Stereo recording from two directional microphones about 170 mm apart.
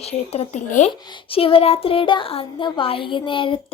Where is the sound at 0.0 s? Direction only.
35° left (ahead or behind).